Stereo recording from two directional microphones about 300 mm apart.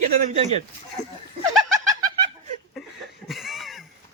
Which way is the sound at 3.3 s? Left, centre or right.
Centre.